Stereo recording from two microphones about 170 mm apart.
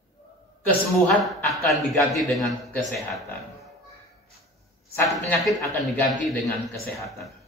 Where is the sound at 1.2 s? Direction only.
Centre (ahead or behind).